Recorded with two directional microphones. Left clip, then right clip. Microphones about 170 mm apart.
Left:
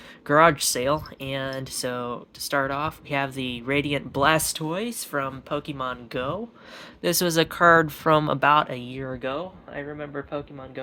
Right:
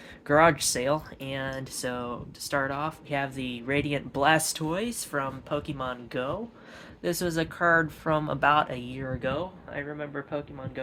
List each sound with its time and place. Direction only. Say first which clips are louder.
0.3 s speech: left 3 dB; 35° left (ahead or behind)
7.0 s speech: left 7 dB; 65° left (ahead or behind)
8.4 s speech: left 3 dB; 45° left (ahead or behind)